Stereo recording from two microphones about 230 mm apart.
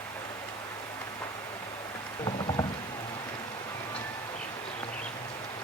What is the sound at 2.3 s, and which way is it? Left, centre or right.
Rowboat, left.